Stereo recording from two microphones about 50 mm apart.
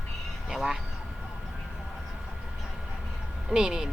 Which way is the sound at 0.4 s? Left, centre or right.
Centre.